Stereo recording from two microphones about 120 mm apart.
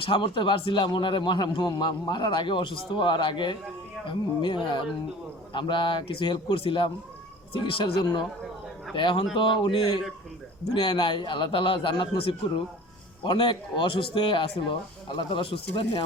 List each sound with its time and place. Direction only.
0.0 s a man's voice: 40° left (ahead or behind)